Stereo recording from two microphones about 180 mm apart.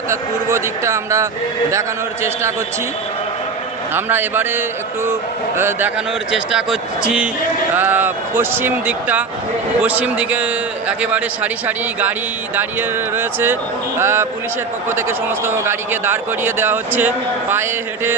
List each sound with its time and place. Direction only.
0.1 s a man's voice: 15° right (ahead or behind)
3.9 s a man's voice: 10° right (ahead or behind)
13.1 s a man's voice: 10° right (ahead or behind)